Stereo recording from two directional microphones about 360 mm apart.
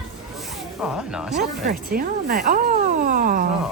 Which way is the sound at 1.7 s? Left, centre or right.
Right.